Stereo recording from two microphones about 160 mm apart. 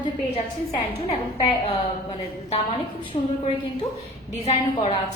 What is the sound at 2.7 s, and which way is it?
A woman's voice, 30° left (ahead or behind).